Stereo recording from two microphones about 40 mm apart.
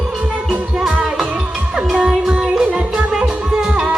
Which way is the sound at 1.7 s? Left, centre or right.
Right.